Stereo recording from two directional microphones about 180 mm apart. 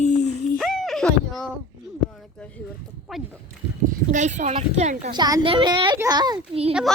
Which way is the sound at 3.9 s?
40° right (ahead or behind).